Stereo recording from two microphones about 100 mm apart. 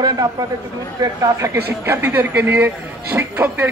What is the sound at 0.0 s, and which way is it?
Speech, 40° right (ahead or behind).